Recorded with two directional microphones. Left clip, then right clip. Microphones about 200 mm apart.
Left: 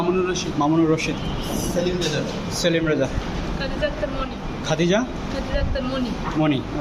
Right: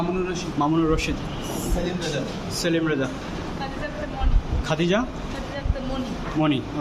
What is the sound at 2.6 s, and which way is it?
Speech, 10° right (ahead or behind).